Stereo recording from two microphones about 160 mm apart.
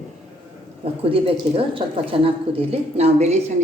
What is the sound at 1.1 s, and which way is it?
A woman's voice, 35° right (ahead or behind).